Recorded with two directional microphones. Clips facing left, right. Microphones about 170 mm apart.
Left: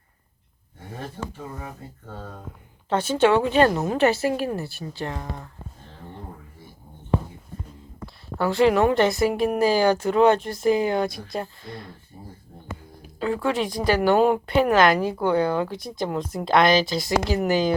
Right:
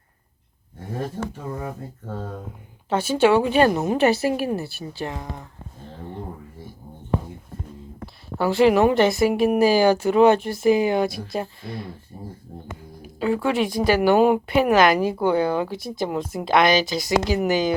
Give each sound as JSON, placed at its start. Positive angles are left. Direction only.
{"t": 2.9, "sound": "a woman's voice", "side_deg": -10}
{"t": 8.4, "sound": "a woman's voice", "side_deg": -10}
{"t": 9.0, "sound": "speech", "side_deg": 0}
{"t": 11.3, "sound": "speech", "side_deg": -20}
{"t": 12.1, "sound": "a sound", "side_deg": -40}
{"t": 13.1, "sound": "speech", "side_deg": -10}